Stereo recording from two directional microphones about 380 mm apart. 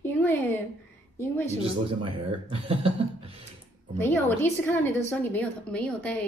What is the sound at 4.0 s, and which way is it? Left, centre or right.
A woman's voice, centre.